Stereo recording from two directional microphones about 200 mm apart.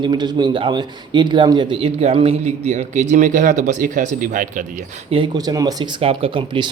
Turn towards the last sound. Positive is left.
turn(degrees=-25)  # may be behind; listen again after turning